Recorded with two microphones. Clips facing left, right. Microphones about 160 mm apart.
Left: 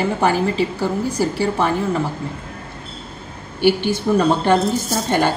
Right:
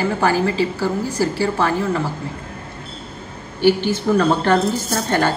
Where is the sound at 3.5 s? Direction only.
15° left (ahead or behind).